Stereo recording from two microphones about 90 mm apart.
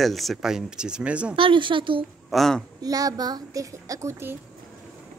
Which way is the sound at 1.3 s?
70° right (ahead or behind).